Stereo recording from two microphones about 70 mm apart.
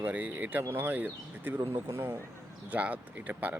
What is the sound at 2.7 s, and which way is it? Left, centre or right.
Speech, right.